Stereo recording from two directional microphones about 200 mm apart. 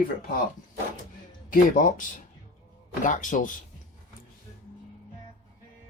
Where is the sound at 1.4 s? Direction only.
45° left (ahead or behind).